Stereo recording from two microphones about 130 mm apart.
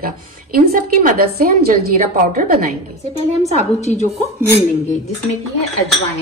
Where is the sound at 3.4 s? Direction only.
60° left (ahead or behind).